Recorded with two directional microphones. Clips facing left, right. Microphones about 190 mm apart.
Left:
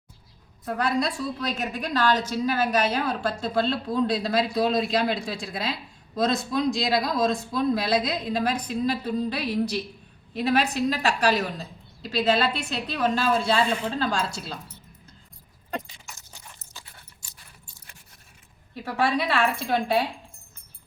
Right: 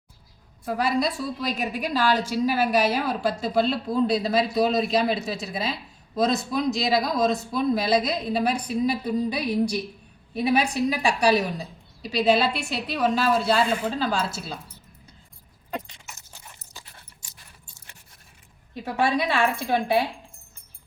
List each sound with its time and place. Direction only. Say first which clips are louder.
0.6 s a woman's voice: right 1 dB; 5° right (ahead or behind)
15.7 s keys jangling: even; 5° right (ahead or behind)
18.9 s a woman's voice: right 1 dB; 15° right (ahead or behind)